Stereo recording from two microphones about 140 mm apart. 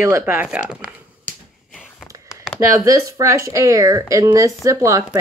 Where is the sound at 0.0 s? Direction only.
15° right (ahead or behind).